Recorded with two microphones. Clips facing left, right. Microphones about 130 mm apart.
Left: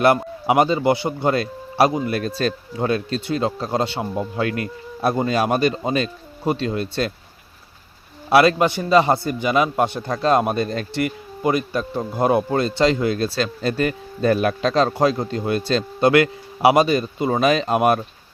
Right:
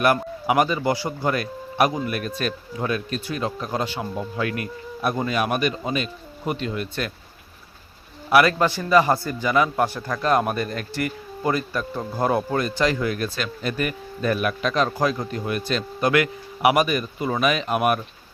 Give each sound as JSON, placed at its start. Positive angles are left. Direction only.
{"t": 0.4, "sound": "a man's voice", "side_deg": 25}
{"t": 4.0, "sound": "a man's voice", "side_deg": 20}
{"t": 8.3, "sound": "a man's voice", "side_deg": 25}